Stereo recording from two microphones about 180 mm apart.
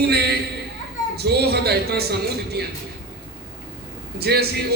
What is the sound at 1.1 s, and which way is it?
A man's voice, 65° right (ahead or behind).